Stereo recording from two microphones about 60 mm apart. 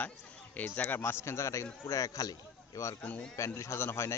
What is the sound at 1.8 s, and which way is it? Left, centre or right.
Speech, left.